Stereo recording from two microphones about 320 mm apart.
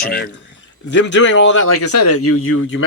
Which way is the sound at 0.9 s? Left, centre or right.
Left.